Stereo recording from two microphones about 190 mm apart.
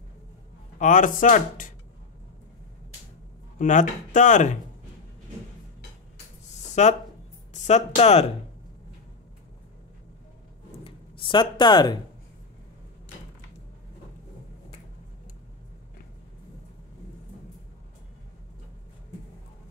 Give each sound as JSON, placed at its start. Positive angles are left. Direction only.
{"t": 0.7, "sound": "speech", "side_deg": 40}
{"t": 3.5, "sound": "speech", "side_deg": 40}
{"t": 6.7, "sound": "a sound", "side_deg": 35}
{"t": 7.6, "sound": "speech", "side_deg": 35}
{"t": 10.8, "sound": "speech", "side_deg": 25}